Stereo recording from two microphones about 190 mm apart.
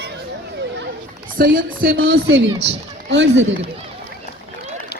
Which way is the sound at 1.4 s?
50° right (ahead or behind).